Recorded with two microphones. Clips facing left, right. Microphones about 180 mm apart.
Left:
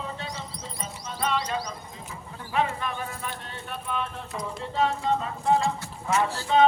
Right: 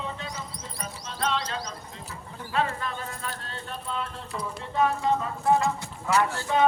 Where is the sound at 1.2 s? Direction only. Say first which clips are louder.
Left 1 dB; 10° left (ahead or behind).